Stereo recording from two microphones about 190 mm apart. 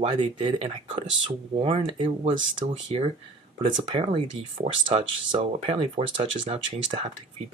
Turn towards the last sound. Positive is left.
turn(degrees=-30)  # may be behind; listen again after turning